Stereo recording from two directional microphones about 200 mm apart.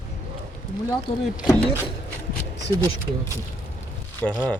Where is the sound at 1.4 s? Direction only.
5° right (ahead or behind).